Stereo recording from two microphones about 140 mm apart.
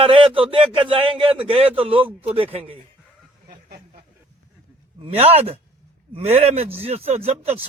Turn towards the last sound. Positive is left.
turn(degrees=-45)  # may be behind; listen again after turning